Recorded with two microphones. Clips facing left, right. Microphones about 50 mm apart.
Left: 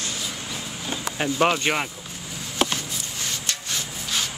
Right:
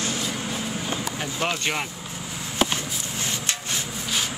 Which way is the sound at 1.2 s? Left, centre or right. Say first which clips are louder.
Left 8 dB; left.